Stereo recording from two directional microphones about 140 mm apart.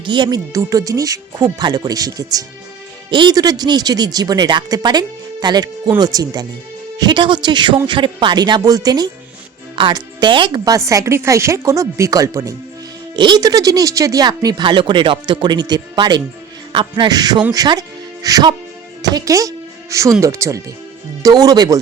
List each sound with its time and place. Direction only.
0.0 s speech: 35° right (ahead or behind)
10.8 s speech: 20° right (ahead or behind)